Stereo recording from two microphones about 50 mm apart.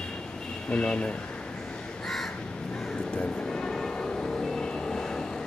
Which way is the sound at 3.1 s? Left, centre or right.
Centre.